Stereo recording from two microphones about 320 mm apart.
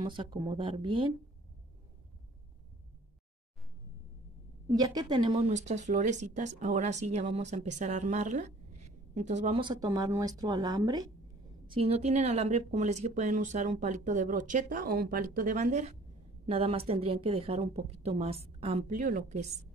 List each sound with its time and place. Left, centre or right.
0.0 s speech: centre
4.6 s speech: centre